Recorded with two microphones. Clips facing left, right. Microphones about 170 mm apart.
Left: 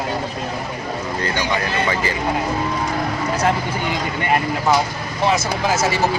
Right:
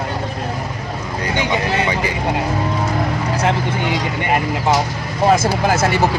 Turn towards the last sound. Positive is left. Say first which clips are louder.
# right 3 dB
turn(degrees=-55)  # may be behind; listen again after turning